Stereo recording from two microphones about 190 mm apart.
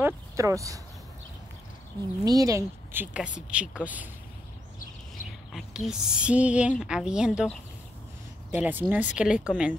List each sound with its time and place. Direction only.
0.0 s speech: 15° right (ahead or behind)
2.2 s a woman's voice: 20° right (ahead or behind)
5.5 s a woman's voice: centre (ahead or behind)